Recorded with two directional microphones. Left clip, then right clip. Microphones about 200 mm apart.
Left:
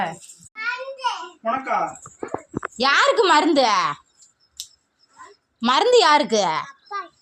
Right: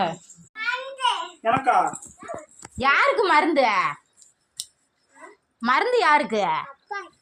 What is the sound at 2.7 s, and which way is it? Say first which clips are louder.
A child's voice: left 2 dB; 35° left (ahead or behind).